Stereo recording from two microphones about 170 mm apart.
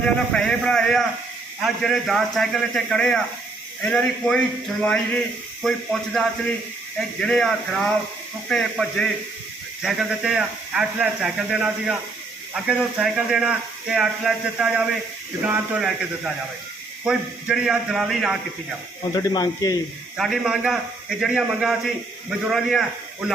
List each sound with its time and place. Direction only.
0.0 s a man's voice: 5° left (ahead or behind)
19.1 s speech: 25° left (ahead or behind)
20.1 s a man's voice: centre (ahead or behind)